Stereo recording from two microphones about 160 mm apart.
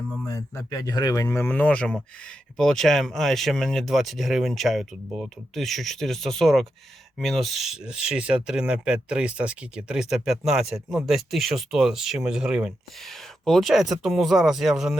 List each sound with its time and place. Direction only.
0.3 s speech: 20° left (ahead or behind); by 14.9 s centre (ahead or behind)